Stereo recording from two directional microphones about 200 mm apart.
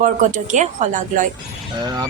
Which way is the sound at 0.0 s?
35° right (ahead or behind).